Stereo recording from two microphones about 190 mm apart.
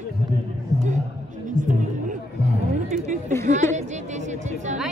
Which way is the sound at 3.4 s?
40° right (ahead or behind).